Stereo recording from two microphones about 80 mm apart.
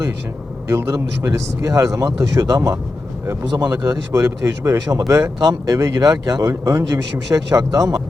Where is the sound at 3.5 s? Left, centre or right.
Right.